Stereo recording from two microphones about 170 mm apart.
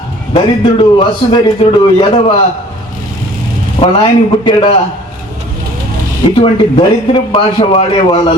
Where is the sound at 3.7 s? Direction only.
35° left (ahead or behind).